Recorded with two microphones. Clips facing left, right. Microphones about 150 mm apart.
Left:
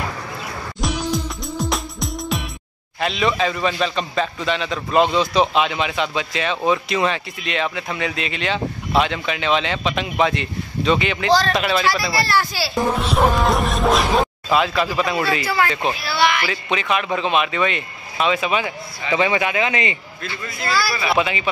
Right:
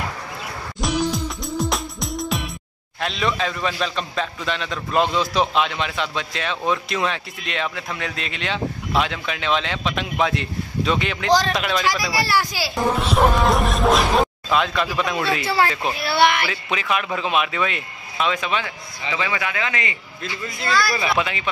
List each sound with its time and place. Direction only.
0.7 s music: centre (ahead or behind)
3.0 s a man's voice: centre (ahead or behind)
12.0 s speech: 10° right (ahead or behind)
12.7 s a man's voice: centre (ahead or behind)
15.4 s speech: 30° right (ahead or behind)
16.0 s speech: 55° right (ahead or behind)
16.7 s a man's voice: centre (ahead or behind)
19.1 s a man's voice: 25° left (ahead or behind)
20.6 s a man's voice: 5° left (ahead or behind)